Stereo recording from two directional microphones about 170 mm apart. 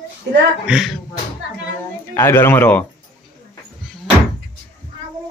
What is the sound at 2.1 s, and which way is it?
Speech, 15° left (ahead or behind).